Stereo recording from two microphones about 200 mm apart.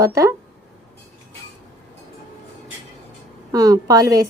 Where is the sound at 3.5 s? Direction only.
15° right (ahead or behind).